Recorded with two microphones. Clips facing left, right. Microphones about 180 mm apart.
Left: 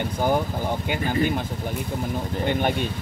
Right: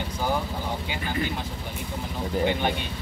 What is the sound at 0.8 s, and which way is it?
Speech, 55° left (ahead or behind).